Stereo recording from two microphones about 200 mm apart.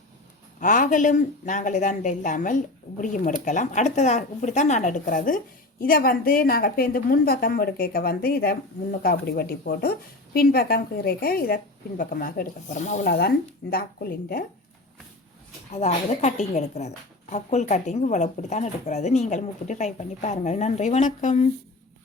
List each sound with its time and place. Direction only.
0.6 s a woman's voice: 40° left (ahead or behind)
13.1 s a woman's voice: 50° left (ahead or behind)
15.7 s a woman's voice: 35° left (ahead or behind)